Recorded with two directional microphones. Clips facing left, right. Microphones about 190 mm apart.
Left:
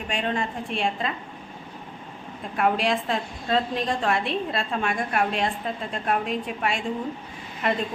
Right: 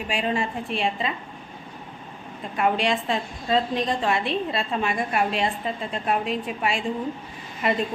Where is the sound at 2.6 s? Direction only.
Centre (ahead or behind).